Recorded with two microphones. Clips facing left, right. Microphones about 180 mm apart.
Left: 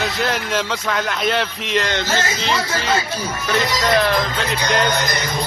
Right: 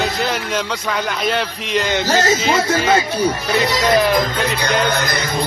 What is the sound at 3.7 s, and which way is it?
Speech, centre (ahead or behind).